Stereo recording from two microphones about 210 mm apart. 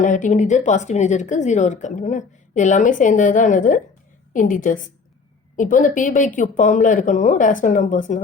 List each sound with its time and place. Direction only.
0.0 s speech: 35° left (ahead or behind)